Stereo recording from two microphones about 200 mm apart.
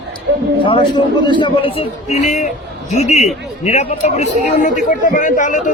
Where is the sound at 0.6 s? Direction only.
25° left (ahead or behind).